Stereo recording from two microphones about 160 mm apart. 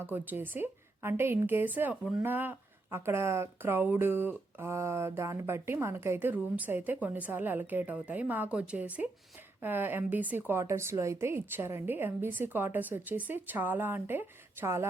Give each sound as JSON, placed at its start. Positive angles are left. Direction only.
{"t": 0.0, "sound": "a woman's voice", "side_deg": -15}